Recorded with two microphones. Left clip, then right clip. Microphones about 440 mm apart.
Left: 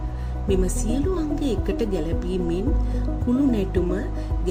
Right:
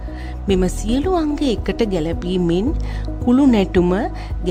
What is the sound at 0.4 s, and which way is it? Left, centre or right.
Speech, right.